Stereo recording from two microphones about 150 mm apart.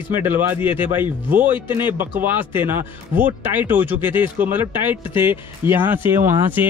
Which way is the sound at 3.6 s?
10° right (ahead or behind).